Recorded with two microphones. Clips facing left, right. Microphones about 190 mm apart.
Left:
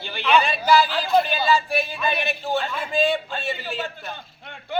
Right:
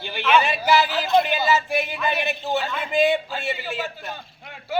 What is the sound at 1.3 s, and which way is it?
Speech, 20° right (ahead or behind).